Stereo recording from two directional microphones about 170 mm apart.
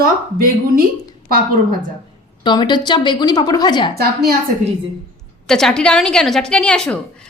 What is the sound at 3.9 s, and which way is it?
Speech, 65° right (ahead or behind).